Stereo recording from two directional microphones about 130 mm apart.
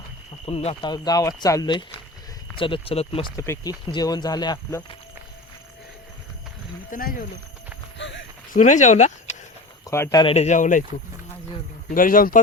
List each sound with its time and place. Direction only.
0.4 s speech: 50° left (ahead or behind)
0.8 s speech: 30° left (ahead or behind)
2.6 s speech: 40° left (ahead or behind)
3.3 s speech: 25° left (ahead or behind)
6.9 s speech: 90° left
8.5 s speech: 70° left (ahead or behind)
9.8 s speech: 25° left (ahead or behind)
10.3 s speech: 65° left (ahead or behind); by 10.8 s 85° left
11.9 s speech: 90° left